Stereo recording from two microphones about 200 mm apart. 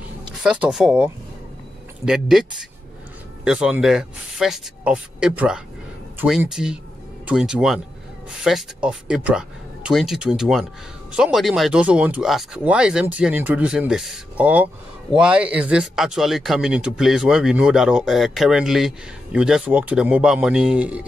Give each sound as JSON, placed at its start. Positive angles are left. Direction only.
{"t": 0.4, "sound": "speech", "side_deg": -5}
{"t": 3.4, "sound": "speech", "side_deg": -5}